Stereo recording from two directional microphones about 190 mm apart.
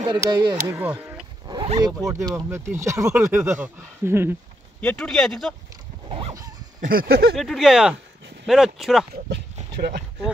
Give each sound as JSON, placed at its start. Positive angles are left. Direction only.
{"t": 0.0, "sound": "speech", "side_deg": -25}
{"t": 0.7, "sound": "speech", "side_deg": -10}
{"t": 1.5, "sound": "speech", "side_deg": -25}
{"t": 4.7, "sound": "speech", "side_deg": 5}
{"t": 6.0, "sound": "a sound", "side_deg": -30}
{"t": 6.8, "sound": "a sound", "side_deg": -50}
{"t": 7.3, "sound": "speech", "side_deg": 0}
{"t": 9.1, "sound": "speech", "side_deg": -55}